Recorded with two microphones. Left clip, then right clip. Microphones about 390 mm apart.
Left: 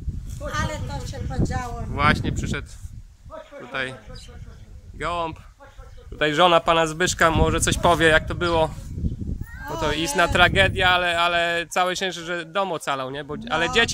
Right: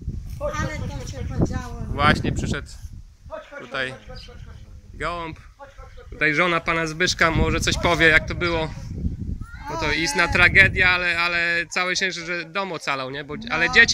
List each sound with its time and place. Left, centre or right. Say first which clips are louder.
0.5 s vehicle: left 1 dB; left
1.4 s speech: right 3 dB; right
2.0 s speech: right 1 dB; centre
3.7 s speech: right 1 dB; centre
4.9 s speech: left 2 dB; centre